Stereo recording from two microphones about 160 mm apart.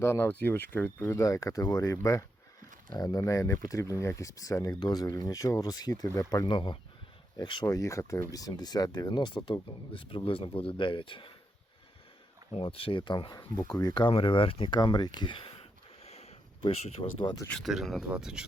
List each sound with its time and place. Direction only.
0.0 s speech: 15° left (ahead or behind); by 11.3 s 30° left (ahead or behind)
12.5 s speech: 35° left (ahead or behind)
16.0 s a sound: 40° left (ahead or behind)
17.5 s speech: centre (ahead or behind)